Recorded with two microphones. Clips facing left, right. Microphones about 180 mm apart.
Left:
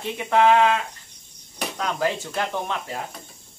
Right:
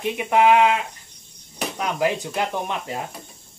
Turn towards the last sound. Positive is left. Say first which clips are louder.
# right 1 dB
turn(degrees=-20)  # may be behind; listen again after turning